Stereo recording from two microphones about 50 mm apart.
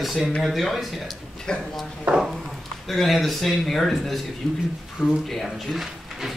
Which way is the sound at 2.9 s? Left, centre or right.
Centre.